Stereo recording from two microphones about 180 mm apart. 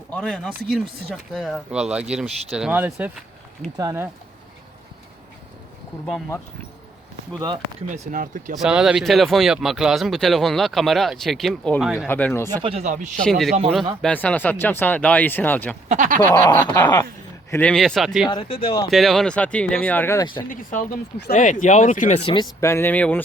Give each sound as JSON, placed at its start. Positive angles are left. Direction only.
{"t": 0.1, "sound": "speech", "side_deg": 5}
{"t": 7.3, "sound": "speech", "side_deg": -25}
{"t": 7.9, "sound": "speech", "side_deg": -45}
{"t": 8.5, "sound": "speech", "side_deg": -5}
{"t": 12.6, "sound": "speech", "side_deg": -35}
{"t": 13.2, "sound": "speech", "side_deg": 0}
{"t": 15.9, "sound": "speech", "side_deg": -45}
{"t": 16.2, "sound": "speech", "side_deg": 10}
{"t": 16.5, "sound": "speech", "side_deg": 20}
{"t": 17.5, "sound": "speech", "side_deg": 5}
{"t": 18.3, "sound": "speech", "side_deg": 30}
{"t": 18.9, "sound": "speech", "side_deg": 0}
{"t": 20.5, "sound": "speech", "side_deg": 50}
{"t": 22.3, "sound": "speech", "side_deg": 20}